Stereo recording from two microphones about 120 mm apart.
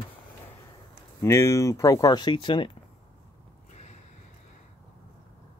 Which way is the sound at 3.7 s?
70° left (ahead or behind).